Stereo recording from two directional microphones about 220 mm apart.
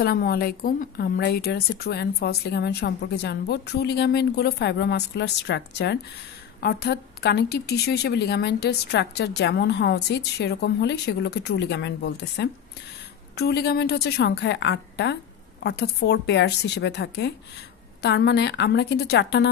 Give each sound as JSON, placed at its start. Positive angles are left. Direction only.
{"t": 0.0, "sound": "a woman's voice", "side_deg": 45}